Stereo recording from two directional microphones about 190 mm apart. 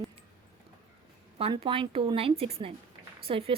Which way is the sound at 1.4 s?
30° right (ahead or behind).